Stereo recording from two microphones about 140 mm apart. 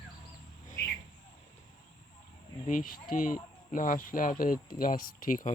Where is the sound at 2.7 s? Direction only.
75° left (ahead or behind).